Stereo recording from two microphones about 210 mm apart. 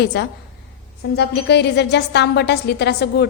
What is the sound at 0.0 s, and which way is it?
A woman's voice, 55° left (ahead or behind).